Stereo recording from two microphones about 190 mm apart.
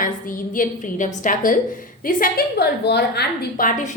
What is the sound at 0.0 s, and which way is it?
A woman's voice, 45° left (ahead or behind).